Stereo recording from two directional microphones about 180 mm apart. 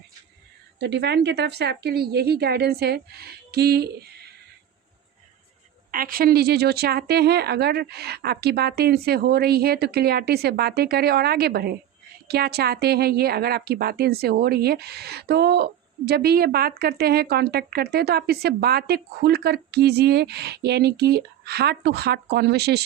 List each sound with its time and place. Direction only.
0.8 s speech: 70° right (ahead or behind)
5.9 s speech: 50° right (ahead or behind)